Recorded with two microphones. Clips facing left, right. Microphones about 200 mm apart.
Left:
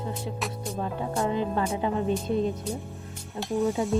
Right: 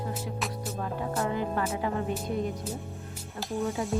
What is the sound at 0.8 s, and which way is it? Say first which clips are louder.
Music: left 3 dB; 25° left (ahead or behind).